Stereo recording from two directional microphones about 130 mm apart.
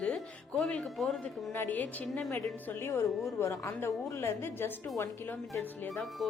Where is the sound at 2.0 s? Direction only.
Centre (ahead or behind).